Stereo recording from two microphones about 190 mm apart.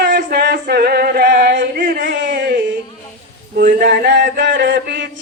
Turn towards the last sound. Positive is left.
turn(degrees=-65)  # may be behind; listen again after turning